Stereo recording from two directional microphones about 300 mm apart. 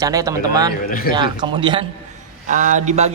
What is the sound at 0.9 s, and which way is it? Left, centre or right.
Speech, left.